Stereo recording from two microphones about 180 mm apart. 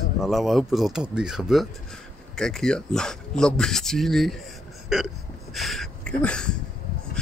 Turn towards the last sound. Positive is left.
turn(degrees=5)  # may be behind; listen again after turning